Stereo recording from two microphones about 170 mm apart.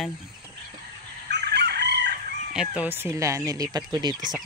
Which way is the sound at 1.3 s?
75° right (ahead or behind).